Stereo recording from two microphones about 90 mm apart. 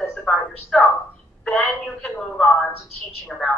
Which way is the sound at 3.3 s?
5° left (ahead or behind).